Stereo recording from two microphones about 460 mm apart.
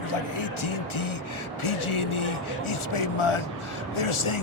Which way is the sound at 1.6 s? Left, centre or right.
Left.